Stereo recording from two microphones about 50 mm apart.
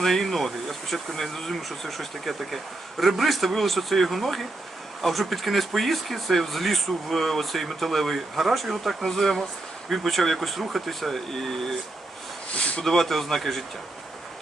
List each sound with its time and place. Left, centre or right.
0.0 s speech: centre
12.5 s speech: left
12.8 s speech: centre